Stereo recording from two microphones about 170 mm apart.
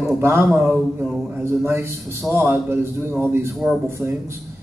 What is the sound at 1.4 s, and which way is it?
A man's voice, 15° right (ahead or behind).